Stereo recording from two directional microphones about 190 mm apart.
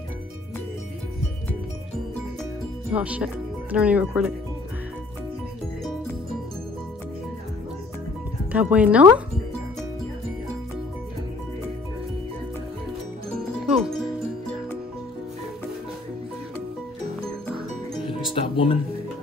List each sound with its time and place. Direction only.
2.9 s speech: 5° right (ahead or behind)
8.5 s speech: 5° right (ahead or behind)
18.0 s music: 25° left (ahead or behind)